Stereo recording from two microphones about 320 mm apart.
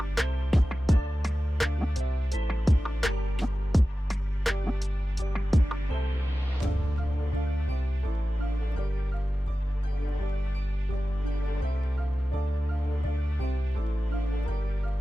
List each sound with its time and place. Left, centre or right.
0.1 s music: centre